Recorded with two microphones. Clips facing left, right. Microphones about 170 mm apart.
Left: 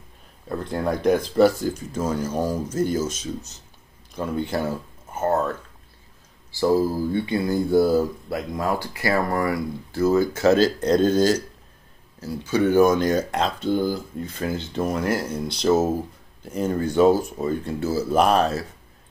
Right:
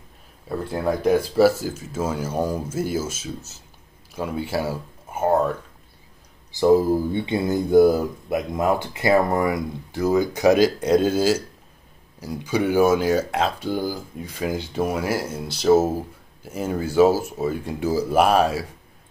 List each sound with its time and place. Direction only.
0.7 s speech: 5° right (ahead or behind)
6.5 s speech: 20° right (ahead or behind)